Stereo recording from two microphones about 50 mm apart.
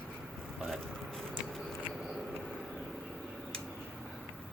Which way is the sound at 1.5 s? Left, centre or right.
Centre.